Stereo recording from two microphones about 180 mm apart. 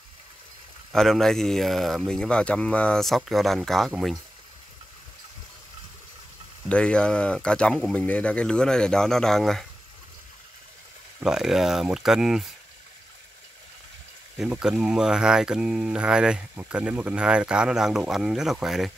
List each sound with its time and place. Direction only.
0.9 s speech: centre (ahead or behind)
6.7 s speech: 5° left (ahead or behind)
11.2 s speech: centre (ahead or behind)
14.4 s speech: 5° right (ahead or behind)